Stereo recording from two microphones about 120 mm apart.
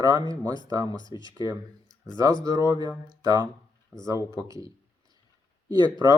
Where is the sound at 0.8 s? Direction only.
40° left (ahead or behind).